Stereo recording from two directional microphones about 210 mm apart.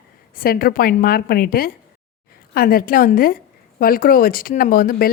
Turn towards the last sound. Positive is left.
turn(degrees=40)  # may be behind; listen again after turning